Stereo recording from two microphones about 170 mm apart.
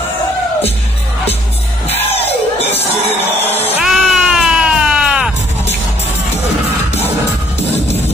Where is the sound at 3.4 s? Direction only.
35° left (ahead or behind).